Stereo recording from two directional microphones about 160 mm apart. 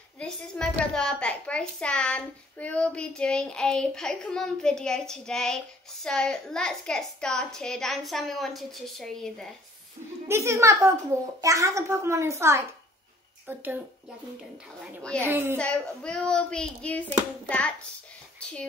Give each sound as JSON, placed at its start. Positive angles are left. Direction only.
{"t": 0.2, "sound": "a woman's voice", "side_deg": 5}
{"t": 10.2, "sound": "a child's voice", "side_deg": -15}
{"t": 15.0, "sound": "speech", "side_deg": 5}
{"t": 15.2, "sound": "a child's voice", "side_deg": -15}
{"t": 15.5, "sound": "a child's voice", "side_deg": 5}